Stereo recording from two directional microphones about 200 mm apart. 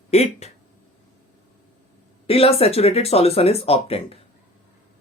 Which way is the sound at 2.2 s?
30° left (ahead or behind).